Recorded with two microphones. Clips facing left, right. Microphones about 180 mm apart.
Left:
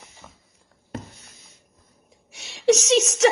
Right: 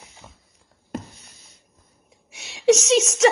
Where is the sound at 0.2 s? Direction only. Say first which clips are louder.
Even; 20° right (ahead or behind).